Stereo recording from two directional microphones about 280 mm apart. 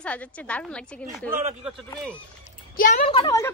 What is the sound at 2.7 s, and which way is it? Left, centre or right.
Speech, left.